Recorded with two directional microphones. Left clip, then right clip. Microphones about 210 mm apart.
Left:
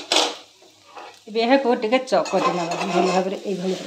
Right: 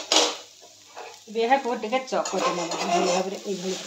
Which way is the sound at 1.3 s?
50° left (ahead or behind).